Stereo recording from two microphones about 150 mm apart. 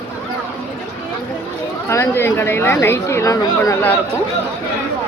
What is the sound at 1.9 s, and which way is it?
Speech, 20° left (ahead or behind).